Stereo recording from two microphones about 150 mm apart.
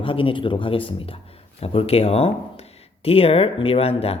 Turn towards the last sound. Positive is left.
turn(degrees=40)  # may be behind; listen again after turning